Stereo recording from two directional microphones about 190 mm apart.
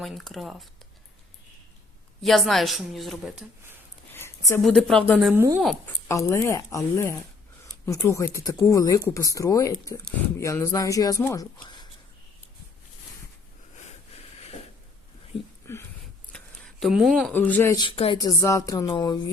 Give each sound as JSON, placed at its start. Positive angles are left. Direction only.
{"t": 0.0, "sound": "a woman's voice", "side_deg": 0}
{"t": 2.2, "sound": "a woman's voice", "side_deg": 0}
{"t": 4.1, "sound": "a sound", "side_deg": 15}
{"t": 4.6, "sound": "a woman's voice", "side_deg": 5}
{"t": 5.3, "sound": "speech", "side_deg": -10}
{"t": 5.5, "sound": "a woman's voice", "side_deg": 0}
{"t": 6.1, "sound": "speech", "side_deg": 15}
{"t": 15.6, "sound": "a sound", "side_deg": 15}
{"t": 16.3, "sound": "speech", "side_deg": 0}
{"t": 17.8, "sound": "music", "side_deg": 30}
{"t": 18.2, "sound": "music", "side_deg": 15}